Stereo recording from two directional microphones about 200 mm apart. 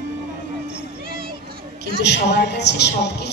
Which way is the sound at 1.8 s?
60° left (ahead or behind).